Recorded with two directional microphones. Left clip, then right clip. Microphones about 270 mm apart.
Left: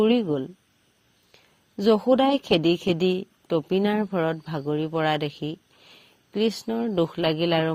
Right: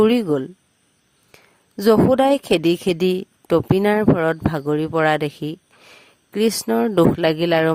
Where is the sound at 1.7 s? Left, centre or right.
Right.